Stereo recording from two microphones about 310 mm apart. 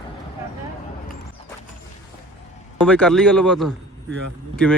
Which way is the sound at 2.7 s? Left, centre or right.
Centre.